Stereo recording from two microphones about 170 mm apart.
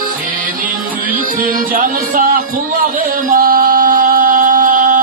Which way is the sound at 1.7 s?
55° right (ahead or behind).